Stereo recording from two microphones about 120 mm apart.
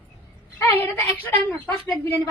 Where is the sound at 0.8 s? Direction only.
15° left (ahead or behind).